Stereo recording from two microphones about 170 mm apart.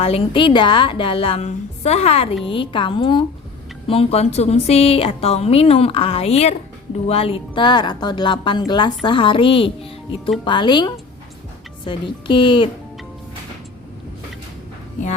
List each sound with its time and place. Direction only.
0.0 s a woman's voice: 35° left (ahead or behind)